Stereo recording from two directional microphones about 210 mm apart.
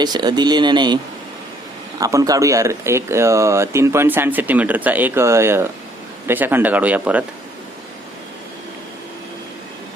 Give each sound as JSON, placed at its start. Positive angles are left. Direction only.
{"t": 0.0, "sound": "speech", "side_deg": -20}
{"t": 2.0, "sound": "speech", "side_deg": -15}